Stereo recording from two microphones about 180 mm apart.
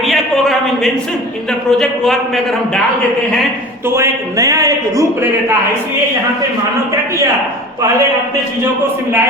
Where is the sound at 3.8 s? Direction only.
15° right (ahead or behind).